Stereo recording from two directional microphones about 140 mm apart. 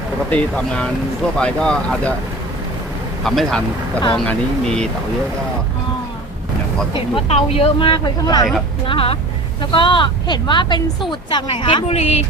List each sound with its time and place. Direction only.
0.3 s speech: 10° left (ahead or behind)
3.2 s speech: 5° left (ahead or behind)
6.9 s a woman's voice: 45° left (ahead or behind)
8.9 s a woman's voice: 40° left (ahead or behind)